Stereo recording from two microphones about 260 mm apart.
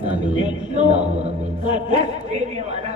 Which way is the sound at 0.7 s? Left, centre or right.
Right.